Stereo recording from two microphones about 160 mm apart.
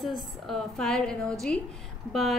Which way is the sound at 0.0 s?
Centre (ahead or behind).